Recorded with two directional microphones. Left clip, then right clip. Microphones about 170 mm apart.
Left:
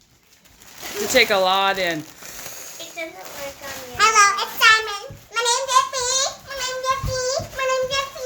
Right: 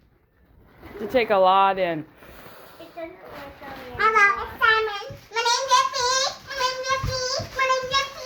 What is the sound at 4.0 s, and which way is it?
Children playing, 30° left (ahead or behind).